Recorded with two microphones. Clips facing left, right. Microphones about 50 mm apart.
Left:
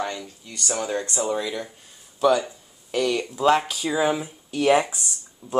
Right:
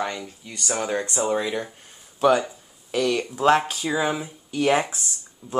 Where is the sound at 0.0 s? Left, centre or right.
Right.